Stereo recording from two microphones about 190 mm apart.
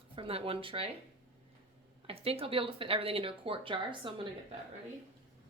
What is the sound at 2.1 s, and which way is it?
Speech, 30° right (ahead or behind).